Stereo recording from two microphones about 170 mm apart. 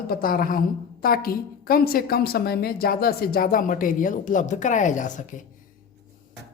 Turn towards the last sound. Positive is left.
turn(degrees=50)  # may be behind; listen again after turning